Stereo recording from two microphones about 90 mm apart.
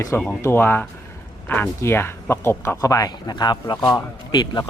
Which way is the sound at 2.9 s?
45° left (ahead or behind).